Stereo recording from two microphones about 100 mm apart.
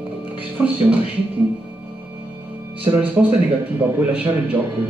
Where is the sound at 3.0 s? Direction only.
15° right (ahead or behind).